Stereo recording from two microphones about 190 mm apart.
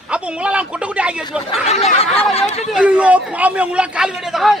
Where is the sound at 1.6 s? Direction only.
35° left (ahead or behind).